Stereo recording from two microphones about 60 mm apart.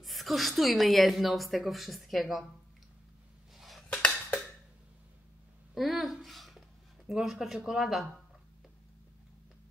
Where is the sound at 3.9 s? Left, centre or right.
Left.